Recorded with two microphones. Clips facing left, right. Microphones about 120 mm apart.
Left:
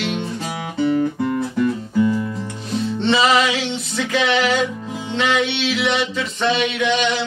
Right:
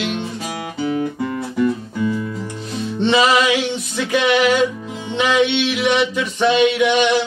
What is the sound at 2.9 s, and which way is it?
Music, 15° right (ahead or behind).